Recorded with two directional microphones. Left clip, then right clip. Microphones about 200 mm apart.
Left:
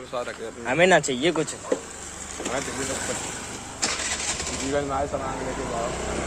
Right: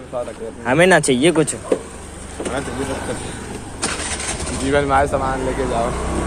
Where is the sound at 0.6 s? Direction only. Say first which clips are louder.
Right 5 dB; 5° right (ahead or behind).